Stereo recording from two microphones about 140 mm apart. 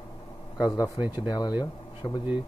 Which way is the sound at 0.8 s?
35° left (ahead or behind).